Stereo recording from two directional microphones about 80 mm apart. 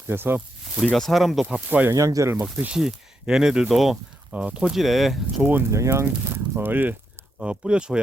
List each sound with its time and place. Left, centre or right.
0.1 s speech: right
0.9 s speech: centre
1.5 s speech: centre
1.9 s speech: right
2.3 s speech: centre
2.7 s speech: centre
5.4 s speech: right
5.7 s speech: right
7.3 s speech: centre